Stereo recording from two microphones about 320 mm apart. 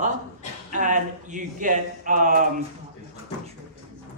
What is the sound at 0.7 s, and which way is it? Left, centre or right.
A man's voice, right.